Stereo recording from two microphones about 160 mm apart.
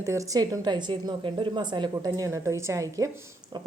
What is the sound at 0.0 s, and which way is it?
A woman's voice, 20° right (ahead or behind).